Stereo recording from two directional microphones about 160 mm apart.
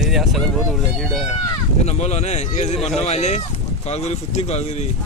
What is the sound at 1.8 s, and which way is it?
Speech, 45° left (ahead or behind).